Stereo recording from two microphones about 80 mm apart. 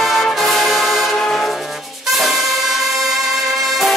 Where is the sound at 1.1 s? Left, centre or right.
Centre.